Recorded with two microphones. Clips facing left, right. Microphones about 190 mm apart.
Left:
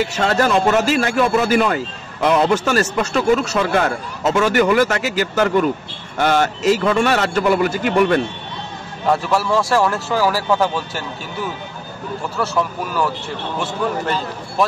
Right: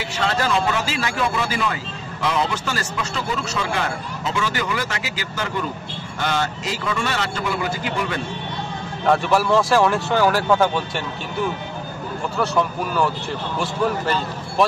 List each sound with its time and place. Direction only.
0.0 s speech: 50° left (ahead or behind)
9.0 s speech: centre (ahead or behind)
12.4 s speech: centre (ahead or behind)